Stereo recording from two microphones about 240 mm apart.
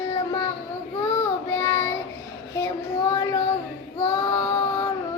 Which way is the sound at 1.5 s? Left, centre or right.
Centre.